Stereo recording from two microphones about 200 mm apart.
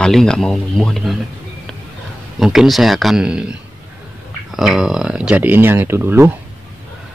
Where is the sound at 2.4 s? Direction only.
Centre (ahead or behind).